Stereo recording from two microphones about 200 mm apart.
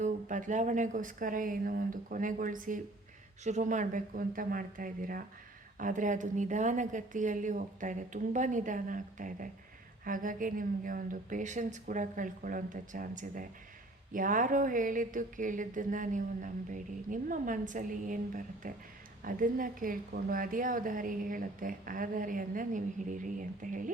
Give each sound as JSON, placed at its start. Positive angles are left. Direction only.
{"t": 0.0, "sound": "a woman's voice", "side_deg": -40}